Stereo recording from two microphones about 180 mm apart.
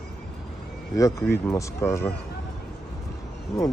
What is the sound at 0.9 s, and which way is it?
Speech, 15° left (ahead or behind).